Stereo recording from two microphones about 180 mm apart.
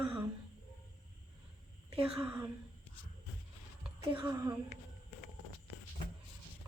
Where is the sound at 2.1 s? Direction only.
10° right (ahead or behind).